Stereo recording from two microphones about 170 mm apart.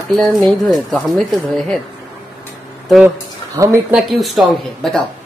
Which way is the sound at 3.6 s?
20° right (ahead or behind).